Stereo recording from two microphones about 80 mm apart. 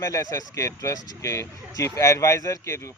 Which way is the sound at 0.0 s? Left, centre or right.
Left.